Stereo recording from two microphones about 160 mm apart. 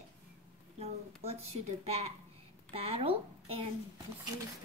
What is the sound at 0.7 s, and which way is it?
A woman's voice, 40° right (ahead or behind).